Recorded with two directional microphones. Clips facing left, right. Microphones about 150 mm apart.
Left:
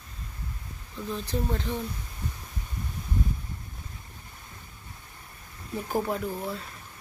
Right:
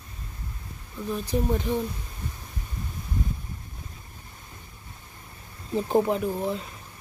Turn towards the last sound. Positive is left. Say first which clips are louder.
# right 5 dB
turn(degrees=-20)  # may be behind; listen again after turning